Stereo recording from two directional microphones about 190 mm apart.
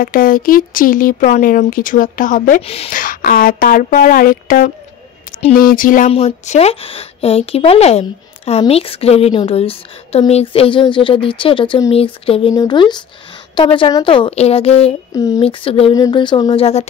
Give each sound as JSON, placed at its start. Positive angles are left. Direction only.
{"t": 0.0, "sound": "speech", "side_deg": 50}
{"t": 2.6, "sound": "speech", "side_deg": 30}
{"t": 2.9, "sound": "speech", "side_deg": 45}
{"t": 15.1, "sound": "speech", "side_deg": 20}
{"t": 15.4, "sound": "speech", "side_deg": 30}
{"t": 15.9, "sound": "speech", "side_deg": 20}